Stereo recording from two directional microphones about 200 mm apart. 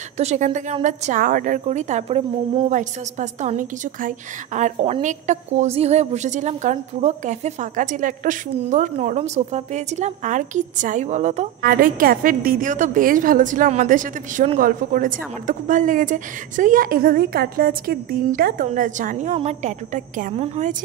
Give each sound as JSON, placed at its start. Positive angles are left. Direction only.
{"t": 0.2, "sound": "a woman's voice", "side_deg": -35}